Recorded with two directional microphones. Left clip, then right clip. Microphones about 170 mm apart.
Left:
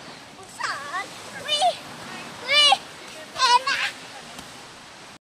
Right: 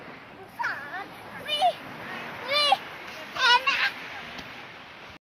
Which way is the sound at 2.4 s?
25° right (ahead or behind).